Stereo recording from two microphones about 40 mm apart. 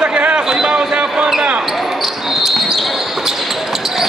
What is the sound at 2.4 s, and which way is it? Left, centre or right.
Basketball bounce, centre.